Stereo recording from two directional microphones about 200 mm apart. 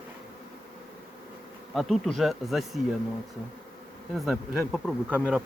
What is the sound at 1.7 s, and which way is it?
Speech, centre (ahead or behind).